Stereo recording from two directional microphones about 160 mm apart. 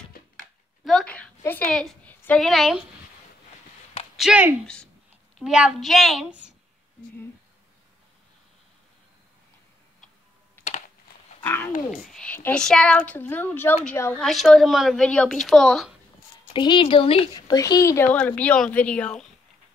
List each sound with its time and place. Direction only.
0.8 s a sound: 5° left (ahead or behind)
4.2 s a woman's voice: 10° right (ahead or behind)
11.4 s speech: 10° left (ahead or behind)
11.9 s speech: centre (ahead or behind)
14.1 s a woman's voice: centre (ahead or behind)
16.5 s speech: 30° left (ahead or behind); by 19.2 s 5° left (ahead or behind)